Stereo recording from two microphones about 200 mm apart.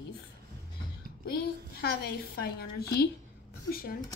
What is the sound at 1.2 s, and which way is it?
A woman's voice, 50° left (ahead or behind).